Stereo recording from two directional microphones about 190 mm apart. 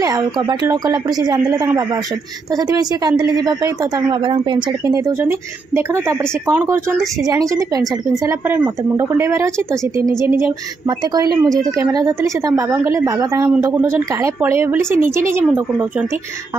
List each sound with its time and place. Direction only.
0.0 s a woman's voice: 20° right (ahead or behind)
2.5 s a woman's voice: 20° right (ahead or behind)